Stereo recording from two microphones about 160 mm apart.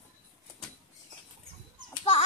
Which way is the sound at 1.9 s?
35° left (ahead or behind).